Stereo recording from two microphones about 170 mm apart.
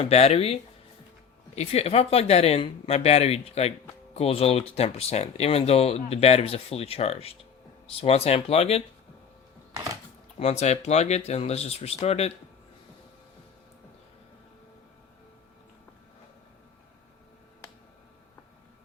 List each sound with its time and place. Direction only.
0.0 s speech: 40° left (ahead or behind)
10.3 s speech: 40° left (ahead or behind)